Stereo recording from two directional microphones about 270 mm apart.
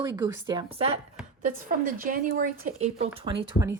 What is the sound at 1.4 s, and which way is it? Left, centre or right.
Speech, right.